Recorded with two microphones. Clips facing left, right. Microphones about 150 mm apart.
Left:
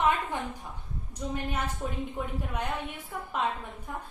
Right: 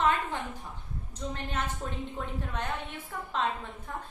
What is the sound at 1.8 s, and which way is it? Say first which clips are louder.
A woman's voice: left 2 dB; 10° left (ahead or behind).